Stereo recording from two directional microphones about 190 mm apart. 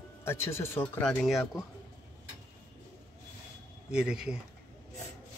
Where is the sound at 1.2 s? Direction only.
Centre (ahead or behind).